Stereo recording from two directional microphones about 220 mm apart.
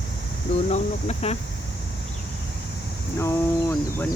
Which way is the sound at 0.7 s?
30° left (ahead or behind).